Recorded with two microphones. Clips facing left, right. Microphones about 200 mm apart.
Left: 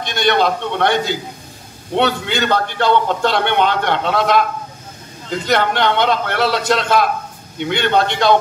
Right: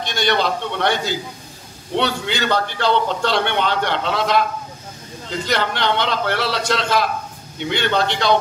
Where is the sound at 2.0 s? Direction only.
55° left (ahead or behind).